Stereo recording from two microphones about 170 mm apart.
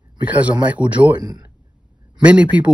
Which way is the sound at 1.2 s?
25° right (ahead or behind).